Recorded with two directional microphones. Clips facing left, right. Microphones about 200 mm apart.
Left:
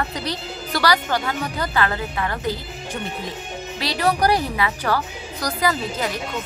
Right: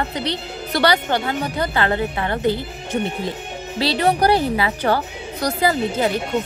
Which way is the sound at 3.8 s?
25° right (ahead or behind).